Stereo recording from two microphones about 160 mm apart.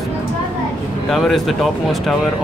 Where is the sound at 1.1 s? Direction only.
Centre (ahead or behind).